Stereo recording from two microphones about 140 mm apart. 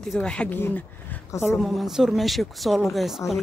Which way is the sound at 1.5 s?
Centre (ahead or behind).